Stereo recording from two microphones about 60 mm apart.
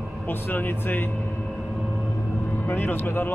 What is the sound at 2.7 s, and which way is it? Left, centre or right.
Speech, left.